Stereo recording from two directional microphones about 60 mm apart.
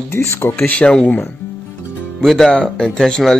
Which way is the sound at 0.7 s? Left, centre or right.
Centre.